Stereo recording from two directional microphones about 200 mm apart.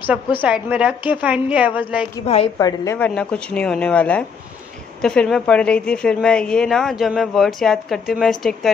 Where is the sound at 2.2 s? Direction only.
30° left (ahead or behind).